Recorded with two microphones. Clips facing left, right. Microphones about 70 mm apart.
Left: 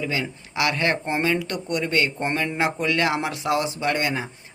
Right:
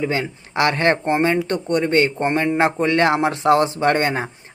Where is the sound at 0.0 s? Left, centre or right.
Right.